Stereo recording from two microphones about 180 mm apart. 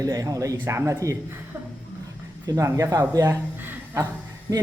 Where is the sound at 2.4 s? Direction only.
20° right (ahead or behind).